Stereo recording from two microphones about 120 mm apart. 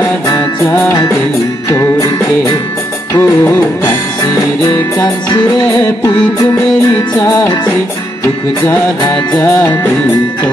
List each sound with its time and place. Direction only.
1.7 s music: 30° left (ahead or behind)
3.2 s music: 25° left (ahead or behind)
8.6 s music: 35° left (ahead or behind)
9.4 s music: 20° left (ahead or behind)